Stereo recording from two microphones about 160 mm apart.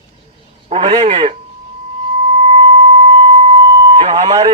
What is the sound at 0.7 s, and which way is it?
Speech, 35° right (ahead or behind).